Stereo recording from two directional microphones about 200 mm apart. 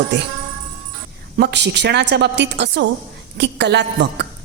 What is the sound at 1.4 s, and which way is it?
A woman's voice, 55° right (ahead or behind).